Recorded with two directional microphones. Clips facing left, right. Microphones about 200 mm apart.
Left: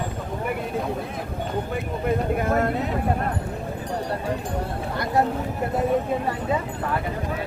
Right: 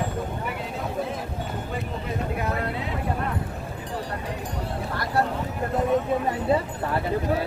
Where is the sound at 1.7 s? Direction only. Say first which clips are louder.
Left 6 dB; 50° left (ahead or behind).